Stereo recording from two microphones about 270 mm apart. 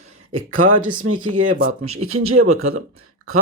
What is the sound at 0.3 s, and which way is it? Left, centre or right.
Speech, right.